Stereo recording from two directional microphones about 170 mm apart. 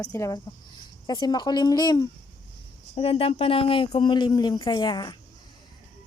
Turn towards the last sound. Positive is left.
turn(degrees=25)  # may be behind; listen again after turning